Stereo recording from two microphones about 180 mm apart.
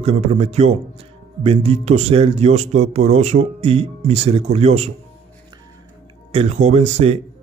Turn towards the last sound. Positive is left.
turn(degrees=-35)  # may be behind; listen again after turning